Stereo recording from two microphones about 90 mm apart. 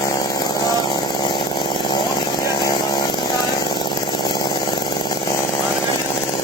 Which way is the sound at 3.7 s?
60° left (ahead or behind).